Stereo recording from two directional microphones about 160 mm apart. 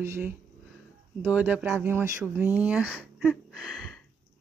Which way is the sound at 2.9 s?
Centre (ahead or behind).